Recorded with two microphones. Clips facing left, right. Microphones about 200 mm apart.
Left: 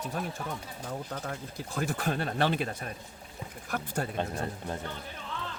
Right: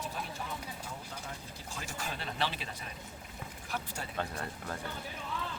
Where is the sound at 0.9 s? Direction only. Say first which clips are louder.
Left 8 dB; 60° left (ahead or behind).